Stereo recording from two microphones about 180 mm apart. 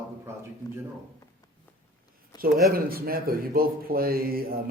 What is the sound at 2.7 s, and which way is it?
Speech, 55° right (ahead or behind).